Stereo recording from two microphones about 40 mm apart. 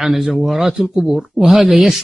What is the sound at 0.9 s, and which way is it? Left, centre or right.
Speech, centre.